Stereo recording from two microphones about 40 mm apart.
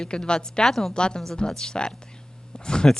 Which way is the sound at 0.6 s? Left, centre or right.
Centre.